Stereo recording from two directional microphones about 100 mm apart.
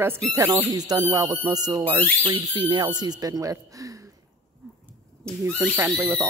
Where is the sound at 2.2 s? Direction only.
50° right (ahead or behind); by 3.9 s 35° right (ahead or behind).